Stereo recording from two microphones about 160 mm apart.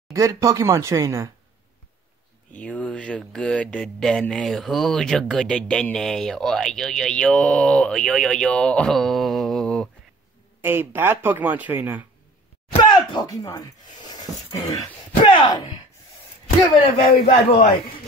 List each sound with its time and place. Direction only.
0.1 s speech: 20° right (ahead or behind)
2.5 s speech: 10° left (ahead or behind)
10.6 s speech: 15° right (ahead or behind)
12.8 s a sound: 25° left (ahead or behind)
16.6 s speech: 35° left (ahead or behind)